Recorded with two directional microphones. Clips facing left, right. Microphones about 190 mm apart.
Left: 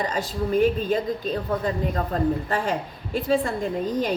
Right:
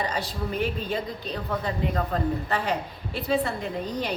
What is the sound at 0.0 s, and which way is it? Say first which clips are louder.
A woman's voice: left 3 dB; 45° left (ahead or behind).